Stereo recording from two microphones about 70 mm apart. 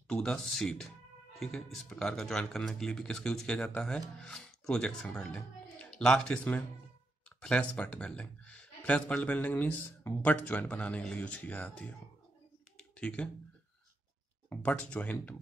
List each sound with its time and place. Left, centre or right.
0.1 s speech: centre
0.4 s speech: centre; by 11.9 s left
12.9 s speech: centre
14.5 s speech: left